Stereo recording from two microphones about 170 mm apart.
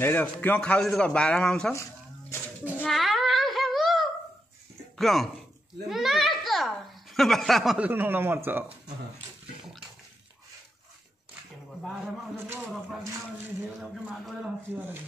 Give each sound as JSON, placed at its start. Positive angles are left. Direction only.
{"t": 0.0, "sound": "a man's voice", "side_deg": 10}
{"t": 1.7, "sound": "a sound", "side_deg": 15}
{"t": 2.8, "sound": "child singing", "side_deg": 0}
{"t": 4.9, "sound": "speech", "side_deg": 0}
{"t": 5.9, "sound": "a sound", "side_deg": 0}
{"t": 7.2, "sound": "speech", "side_deg": 0}
{"t": 11.8, "sound": "a man's voice", "side_deg": -5}